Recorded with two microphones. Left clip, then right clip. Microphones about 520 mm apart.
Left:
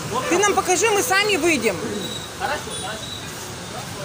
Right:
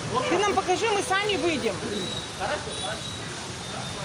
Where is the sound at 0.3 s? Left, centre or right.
Right.